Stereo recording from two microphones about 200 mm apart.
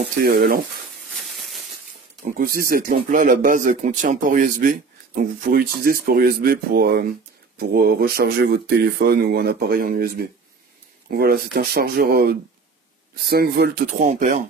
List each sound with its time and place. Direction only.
0.2 s speech: 50° right (ahead or behind)
2.3 s speech: 45° right (ahead or behind)